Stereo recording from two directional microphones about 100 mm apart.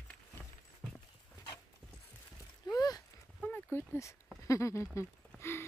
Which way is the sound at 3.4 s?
20° left (ahead or behind).